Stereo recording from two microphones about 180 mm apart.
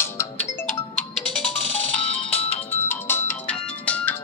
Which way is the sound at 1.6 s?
35° left (ahead or behind).